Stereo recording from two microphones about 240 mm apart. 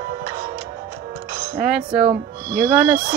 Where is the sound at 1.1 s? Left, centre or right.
Centre.